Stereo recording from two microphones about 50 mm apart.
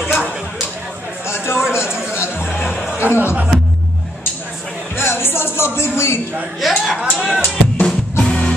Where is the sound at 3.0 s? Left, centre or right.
Right.